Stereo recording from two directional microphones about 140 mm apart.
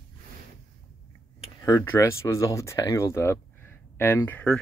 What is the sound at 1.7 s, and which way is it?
Speech, 20° left (ahead or behind).